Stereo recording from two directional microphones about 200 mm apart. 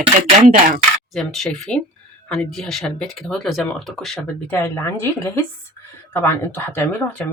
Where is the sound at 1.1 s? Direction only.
Centre (ahead or behind).